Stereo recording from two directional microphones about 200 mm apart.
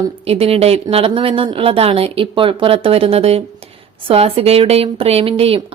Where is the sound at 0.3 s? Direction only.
30° right (ahead or behind).